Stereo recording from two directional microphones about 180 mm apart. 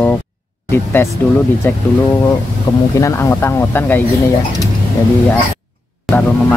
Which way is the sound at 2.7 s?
20° left (ahead or behind).